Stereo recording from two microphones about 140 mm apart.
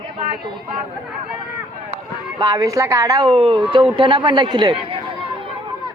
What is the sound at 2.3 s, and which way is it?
A woman's voice, 25° right (ahead or behind).